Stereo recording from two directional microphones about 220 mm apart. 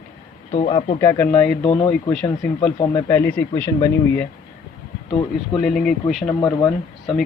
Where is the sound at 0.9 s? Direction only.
10° left (ahead or behind).